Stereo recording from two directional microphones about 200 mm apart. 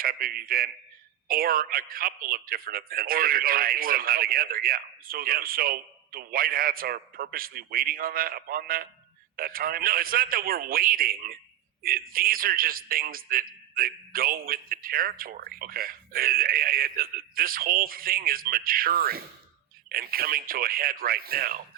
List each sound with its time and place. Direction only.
0.0 s speech: 45° right (ahead or behind)